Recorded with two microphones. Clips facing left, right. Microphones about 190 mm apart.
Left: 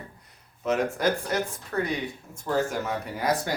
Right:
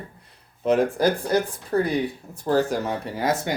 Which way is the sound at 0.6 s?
30° right (ahead or behind).